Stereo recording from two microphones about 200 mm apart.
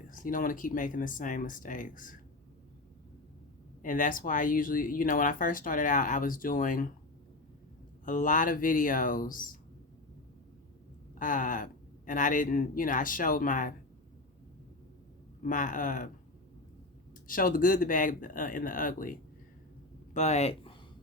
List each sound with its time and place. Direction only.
0.1 s speech: 45° left (ahead or behind)
3.8 s speech: 40° left (ahead or behind)
8.0 s speech: 40° left (ahead or behind)
11.2 s speech: 40° left (ahead or behind)
15.4 s speech: 40° left (ahead or behind)
17.2 s speech: 45° left (ahead or behind)
20.1 s speech: 35° left (ahead or behind)